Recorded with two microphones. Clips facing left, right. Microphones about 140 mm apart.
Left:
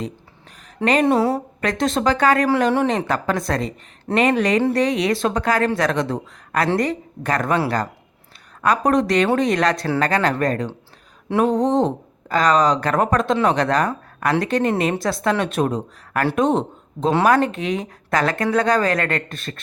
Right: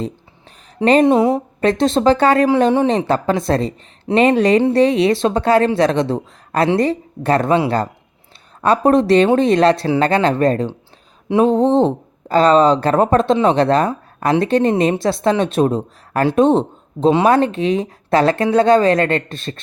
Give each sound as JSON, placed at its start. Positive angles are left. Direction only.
{"t": 1.0, "sound": "a woman's voice", "side_deg": -15}
{"t": 1.6, "sound": "speech", "side_deg": -30}